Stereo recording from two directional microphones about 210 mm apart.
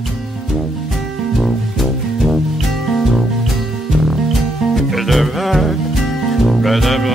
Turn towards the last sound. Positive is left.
turn(degrees=0)  # may be behind; listen again after turning